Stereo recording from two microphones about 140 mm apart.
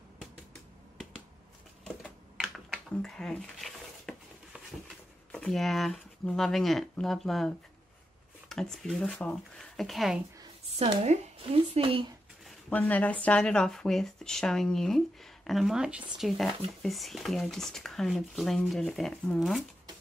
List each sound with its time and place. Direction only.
2.0 s typing: centre (ahead or behind)
5.3 s speech: 5° left (ahead or behind)
10.8 s speech: 45° right (ahead or behind)
12.6 s speech: 10° left (ahead or behind)